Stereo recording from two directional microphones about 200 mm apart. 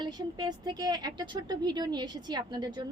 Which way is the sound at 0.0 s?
20° right (ahead or behind).